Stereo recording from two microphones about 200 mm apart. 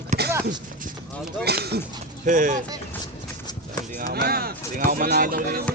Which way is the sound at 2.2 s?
40° right (ahead or behind).